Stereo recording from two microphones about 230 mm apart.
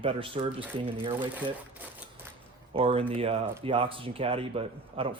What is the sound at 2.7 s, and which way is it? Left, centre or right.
A man's voice, right.